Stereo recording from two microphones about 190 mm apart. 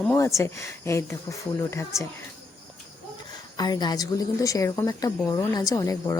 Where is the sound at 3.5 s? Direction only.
20° left (ahead or behind).